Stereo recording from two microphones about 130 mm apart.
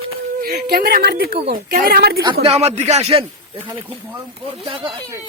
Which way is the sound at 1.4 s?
45° right (ahead or behind).